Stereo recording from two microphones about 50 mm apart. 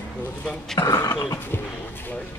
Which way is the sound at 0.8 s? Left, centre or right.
Left.